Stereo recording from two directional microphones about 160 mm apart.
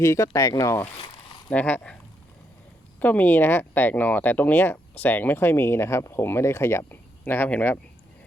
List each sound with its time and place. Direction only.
0.0 s speech: 20° left (ahead or behind)
0.9 s zipper: 35° left (ahead or behind)
1.5 s speech: 10° left (ahead or behind)
3.0 s speech: 10° left (ahead or behind)